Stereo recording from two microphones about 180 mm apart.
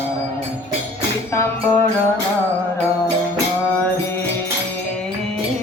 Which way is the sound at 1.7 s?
10° left (ahead or behind).